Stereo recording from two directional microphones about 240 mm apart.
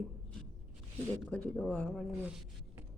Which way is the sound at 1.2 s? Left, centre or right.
Centre.